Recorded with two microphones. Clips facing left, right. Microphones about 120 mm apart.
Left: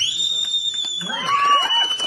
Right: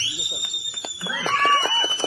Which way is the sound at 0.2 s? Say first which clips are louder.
Even; 40° right (ahead or behind).